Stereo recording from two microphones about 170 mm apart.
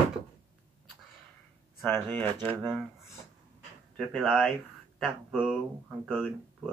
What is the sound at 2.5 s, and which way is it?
Speech, centre (ahead or behind).